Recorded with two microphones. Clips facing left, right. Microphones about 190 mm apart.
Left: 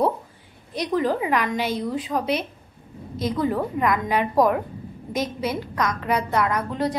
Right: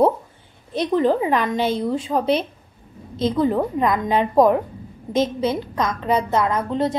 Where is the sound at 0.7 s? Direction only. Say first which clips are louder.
Right 4 dB; 25° right (ahead or behind).